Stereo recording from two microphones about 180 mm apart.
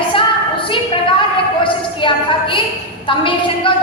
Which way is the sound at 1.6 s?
30° left (ahead or behind).